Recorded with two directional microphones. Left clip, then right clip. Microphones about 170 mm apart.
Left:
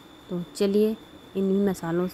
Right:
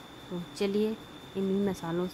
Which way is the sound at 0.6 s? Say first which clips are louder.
Left 7 dB; 30° left (ahead or behind).